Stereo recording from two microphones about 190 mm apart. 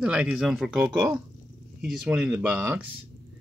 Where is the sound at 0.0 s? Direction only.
5° right (ahead or behind).